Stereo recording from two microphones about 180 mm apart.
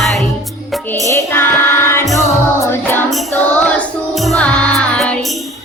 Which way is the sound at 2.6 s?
10° left (ahead or behind).